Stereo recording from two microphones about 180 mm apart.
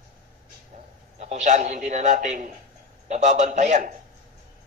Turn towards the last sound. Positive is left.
turn(degrees=-45)  # may be behind; listen again after turning